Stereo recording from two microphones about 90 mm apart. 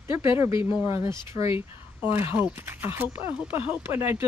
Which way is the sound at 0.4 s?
35° right (ahead or behind).